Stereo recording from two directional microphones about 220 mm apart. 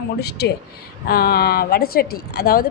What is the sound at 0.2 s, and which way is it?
Speech, 45° left (ahead or behind).